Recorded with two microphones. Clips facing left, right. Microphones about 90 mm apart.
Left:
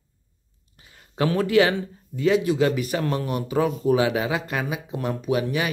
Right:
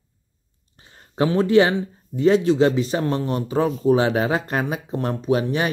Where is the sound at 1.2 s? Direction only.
25° right (ahead or behind).